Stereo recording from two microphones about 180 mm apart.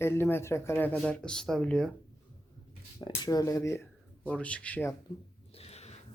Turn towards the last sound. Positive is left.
turn(degrees=35)  # may be behind; listen again after turning